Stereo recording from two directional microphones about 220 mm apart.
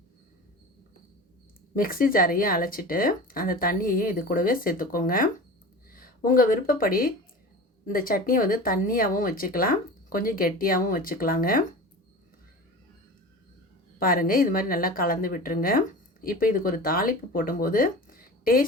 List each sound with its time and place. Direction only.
1.7 s speech: 40° left (ahead or behind)
14.0 s speech: 40° left (ahead or behind)